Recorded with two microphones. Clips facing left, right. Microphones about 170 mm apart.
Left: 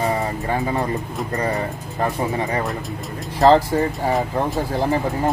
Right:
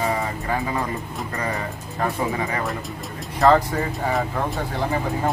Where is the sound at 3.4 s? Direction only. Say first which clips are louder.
Left 3 dB; 35° left (ahead or behind).